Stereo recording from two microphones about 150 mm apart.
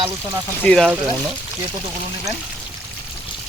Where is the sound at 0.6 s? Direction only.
5° left (ahead or behind).